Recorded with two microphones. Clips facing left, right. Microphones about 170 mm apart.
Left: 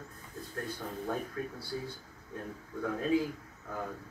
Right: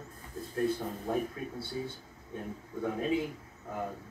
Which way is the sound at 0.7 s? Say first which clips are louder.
Right 2 dB; 25° right (ahead or behind).